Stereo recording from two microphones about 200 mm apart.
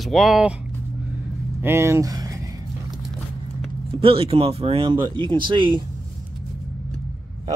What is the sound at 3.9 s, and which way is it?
Speech, 25° right (ahead or behind).